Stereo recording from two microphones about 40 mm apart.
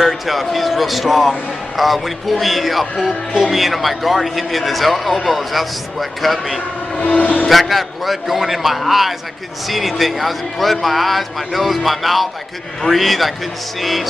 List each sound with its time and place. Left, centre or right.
0.0 s a man's voice: centre
7.2 s speech: left
7.4 s a man's voice: centre